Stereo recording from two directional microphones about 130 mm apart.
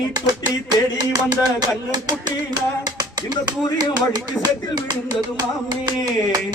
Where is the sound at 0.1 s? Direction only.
30° right (ahead or behind).